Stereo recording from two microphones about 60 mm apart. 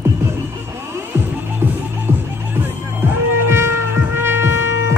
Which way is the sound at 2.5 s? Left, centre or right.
Right.